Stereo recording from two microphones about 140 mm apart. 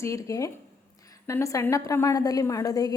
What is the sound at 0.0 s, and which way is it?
A woman's voice, 20° left (ahead or behind).